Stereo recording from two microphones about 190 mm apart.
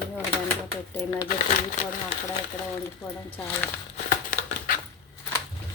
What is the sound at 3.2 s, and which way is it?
Speech, 10° left (ahead or behind).